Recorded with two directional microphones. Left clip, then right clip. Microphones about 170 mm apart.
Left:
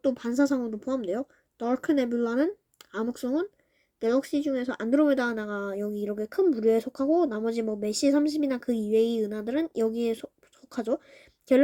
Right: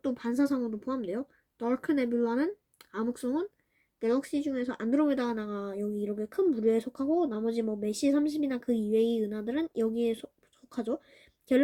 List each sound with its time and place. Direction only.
0.0 s speech: 20° left (ahead or behind)